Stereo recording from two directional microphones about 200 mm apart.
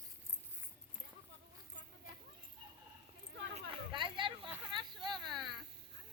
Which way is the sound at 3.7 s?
25° right (ahead or behind).